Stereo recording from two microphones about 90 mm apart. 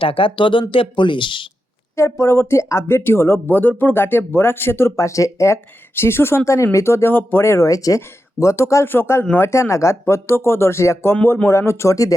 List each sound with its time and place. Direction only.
0.0 s speech: 85° left; by 1.5 s 65° left (ahead or behind)
2.0 s speech: 30° left (ahead or behind)